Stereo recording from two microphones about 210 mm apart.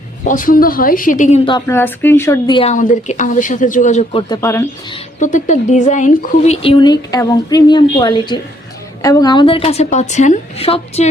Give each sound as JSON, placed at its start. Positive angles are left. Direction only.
{"t": 0.3, "sound": "speech", "side_deg": 40}
{"t": 1.5, "sound": "speech", "side_deg": 15}
{"t": 2.6, "sound": "speech", "side_deg": 35}
{"t": 4.3, "sound": "speech", "side_deg": 15}
{"t": 5.2, "sound": "speech", "side_deg": 35}